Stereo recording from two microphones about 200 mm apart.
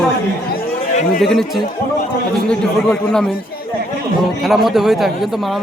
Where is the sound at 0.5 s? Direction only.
45° left (ahead or behind).